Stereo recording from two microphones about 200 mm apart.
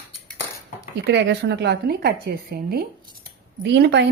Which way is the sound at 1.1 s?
60° right (ahead or behind).